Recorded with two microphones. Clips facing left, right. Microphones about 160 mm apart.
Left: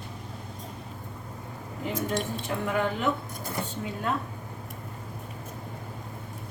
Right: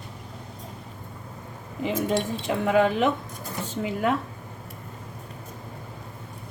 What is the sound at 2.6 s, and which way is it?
Speech, 90° right.